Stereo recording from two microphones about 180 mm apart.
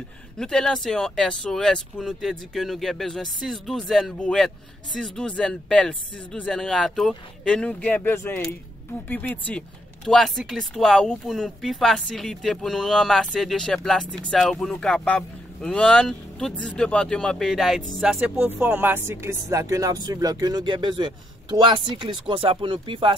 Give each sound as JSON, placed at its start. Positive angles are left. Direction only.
{"t": 0.4, "sound": "speech", "side_deg": 5}